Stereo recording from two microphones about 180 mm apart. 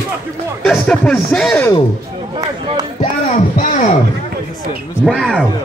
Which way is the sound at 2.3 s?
25° right (ahead or behind).